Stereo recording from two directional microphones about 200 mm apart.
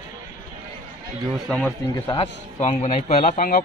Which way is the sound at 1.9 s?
20° left (ahead or behind).